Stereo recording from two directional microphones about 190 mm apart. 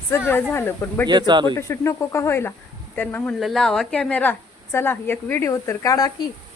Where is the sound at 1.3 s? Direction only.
25° right (ahead or behind).